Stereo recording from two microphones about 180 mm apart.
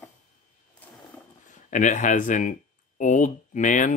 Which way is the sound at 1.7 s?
45° left (ahead or behind).